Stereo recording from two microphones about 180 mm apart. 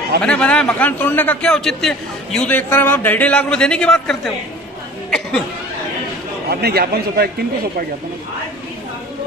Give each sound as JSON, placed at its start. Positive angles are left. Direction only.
{"t": 0.2, "sound": "a man's voice", "side_deg": 5}
{"t": 6.5, "sound": "a man's voice", "side_deg": -60}